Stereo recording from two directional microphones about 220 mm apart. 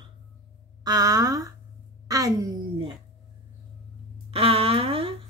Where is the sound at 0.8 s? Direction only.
15° right (ahead or behind).